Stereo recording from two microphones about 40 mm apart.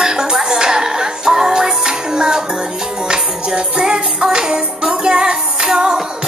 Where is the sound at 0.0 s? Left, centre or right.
Centre.